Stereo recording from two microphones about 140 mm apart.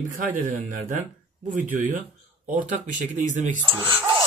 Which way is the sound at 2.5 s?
70° right (ahead or behind).